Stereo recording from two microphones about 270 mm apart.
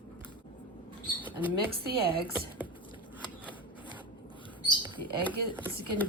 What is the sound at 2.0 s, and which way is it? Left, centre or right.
Speech, right.